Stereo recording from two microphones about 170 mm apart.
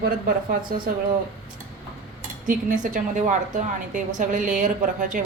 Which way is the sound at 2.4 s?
50° right (ahead or behind).